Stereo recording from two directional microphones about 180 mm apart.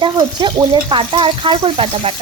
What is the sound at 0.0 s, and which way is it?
Speech, 25° right (ahead or behind).